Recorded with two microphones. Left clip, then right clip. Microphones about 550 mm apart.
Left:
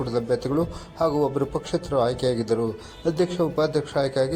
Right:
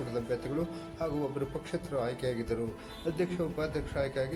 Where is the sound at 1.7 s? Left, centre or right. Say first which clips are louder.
Left 12 dB; right.